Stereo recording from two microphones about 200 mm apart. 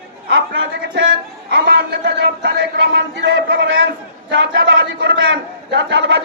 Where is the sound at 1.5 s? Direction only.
60° right (ahead or behind).